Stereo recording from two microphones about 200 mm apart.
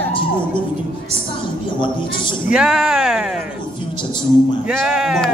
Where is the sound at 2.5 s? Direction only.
5° right (ahead or behind).